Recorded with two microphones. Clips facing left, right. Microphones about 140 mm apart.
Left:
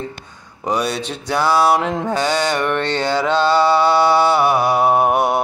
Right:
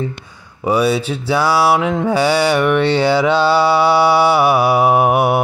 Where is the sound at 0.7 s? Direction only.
10° right (ahead or behind).